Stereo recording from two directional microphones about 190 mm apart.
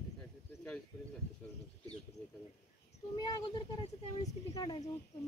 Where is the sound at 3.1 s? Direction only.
20° left (ahead or behind).